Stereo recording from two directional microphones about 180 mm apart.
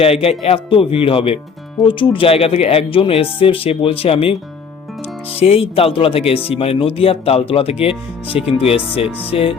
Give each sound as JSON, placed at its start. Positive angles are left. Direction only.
{"t": 0.0, "sound": "speech", "side_deg": 35}